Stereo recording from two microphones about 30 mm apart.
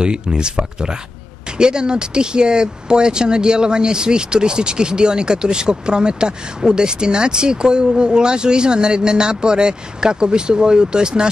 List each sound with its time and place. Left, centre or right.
0.0 s speech: right